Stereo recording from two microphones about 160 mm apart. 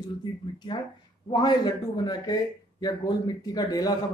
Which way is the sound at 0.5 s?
30° left (ahead or behind).